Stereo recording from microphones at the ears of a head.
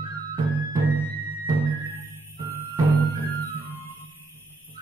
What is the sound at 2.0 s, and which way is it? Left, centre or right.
Music, right.